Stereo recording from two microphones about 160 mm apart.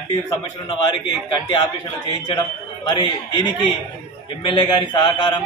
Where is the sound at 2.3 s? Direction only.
25° left (ahead or behind).